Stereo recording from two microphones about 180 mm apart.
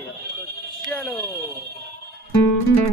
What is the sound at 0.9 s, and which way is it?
Speech, centre (ahead or behind).